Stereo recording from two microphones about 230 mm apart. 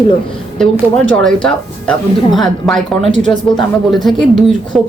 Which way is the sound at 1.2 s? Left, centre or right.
Centre.